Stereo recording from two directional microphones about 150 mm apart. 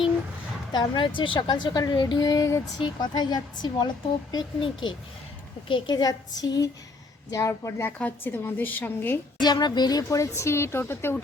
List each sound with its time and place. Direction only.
0.7 s a woman's voice: 30° left (ahead or behind); by 9.1 s 15° left (ahead or behind)
9.4 s a woman's voice: 30° left (ahead or behind)